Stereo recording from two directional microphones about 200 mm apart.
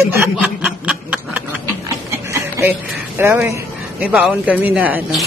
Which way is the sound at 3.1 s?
10° right (ahead or behind).